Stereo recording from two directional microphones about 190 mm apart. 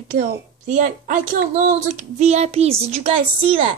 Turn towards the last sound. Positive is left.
turn(degrees=-30)  # may be behind; listen again after turning